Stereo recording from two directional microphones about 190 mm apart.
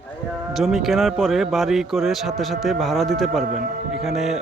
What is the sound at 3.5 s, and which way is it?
Speech, 45° right (ahead or behind).